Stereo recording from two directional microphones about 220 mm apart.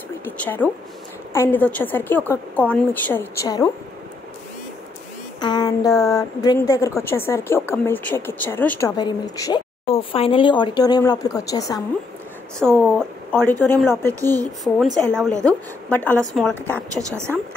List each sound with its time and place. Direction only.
0.2 s a woman's voice: 10° left (ahead or behind)
5.4 s a woman's voice: 20° left (ahead or behind)
12.5 s a woman's voice: 5° left (ahead or behind)